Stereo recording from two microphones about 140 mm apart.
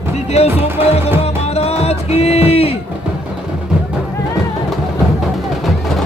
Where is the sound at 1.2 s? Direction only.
45° left (ahead or behind).